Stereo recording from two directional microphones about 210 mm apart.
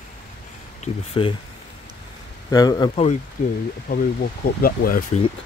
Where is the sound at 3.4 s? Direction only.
35° left (ahead or behind).